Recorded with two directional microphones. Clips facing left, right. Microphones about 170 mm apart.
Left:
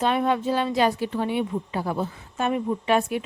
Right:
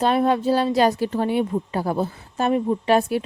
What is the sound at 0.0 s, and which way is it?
Speech, 35° right (ahead or behind).